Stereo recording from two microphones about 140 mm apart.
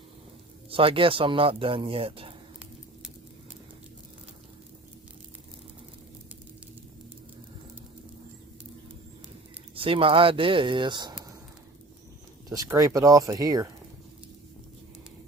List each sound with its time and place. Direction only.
0.7 s a man's voice: 40° right (ahead or behind)
9.7 s a man's voice: 40° right (ahead or behind)
12.5 s speech: 25° right (ahead or behind)